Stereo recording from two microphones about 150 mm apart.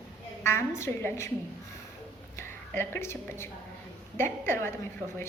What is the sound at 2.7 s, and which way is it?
A woman's voice, 15° left (ahead or behind).